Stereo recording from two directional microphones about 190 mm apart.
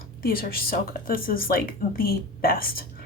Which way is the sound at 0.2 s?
50° left (ahead or behind).